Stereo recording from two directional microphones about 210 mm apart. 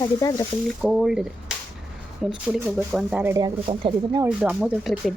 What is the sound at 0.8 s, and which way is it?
Speech, 5° right (ahead or behind).